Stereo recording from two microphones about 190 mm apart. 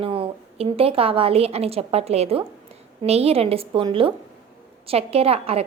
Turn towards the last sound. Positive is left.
turn(degrees=-30)  # may be behind; listen again after turning